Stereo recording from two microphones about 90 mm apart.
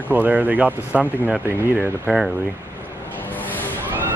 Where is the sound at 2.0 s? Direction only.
Centre (ahead or behind).